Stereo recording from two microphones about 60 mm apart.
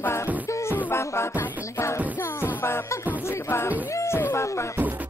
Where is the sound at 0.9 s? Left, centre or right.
Left.